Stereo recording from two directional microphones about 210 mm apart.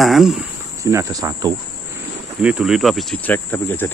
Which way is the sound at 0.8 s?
15° right (ahead or behind).